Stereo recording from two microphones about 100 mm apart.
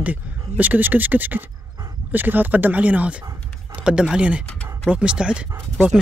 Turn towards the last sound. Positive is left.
turn(degrees=-20)  # may be behind; listen again after turning